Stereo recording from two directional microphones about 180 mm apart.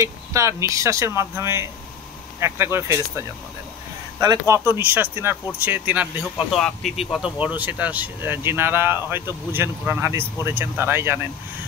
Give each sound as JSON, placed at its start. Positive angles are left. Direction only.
{"t": 0.0, "sound": "speech", "side_deg": -15}